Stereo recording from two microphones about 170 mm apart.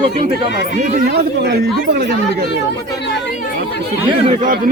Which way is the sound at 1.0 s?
75° right (ahead or behind).